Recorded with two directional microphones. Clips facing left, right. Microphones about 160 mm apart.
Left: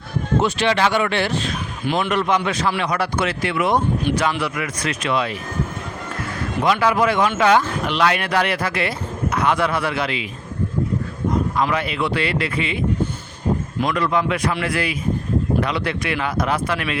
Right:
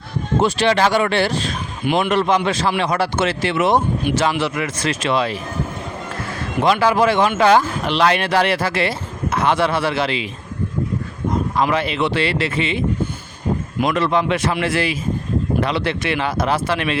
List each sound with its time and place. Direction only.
0.4 s speech: 35° right (ahead or behind)
6.6 s speech: 30° right (ahead or behind)
11.7 s speech: 30° right (ahead or behind)
13.8 s speech: 25° right (ahead or behind)